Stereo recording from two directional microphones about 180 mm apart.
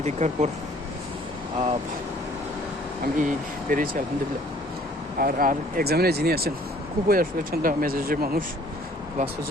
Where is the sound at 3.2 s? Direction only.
45° right (ahead or behind).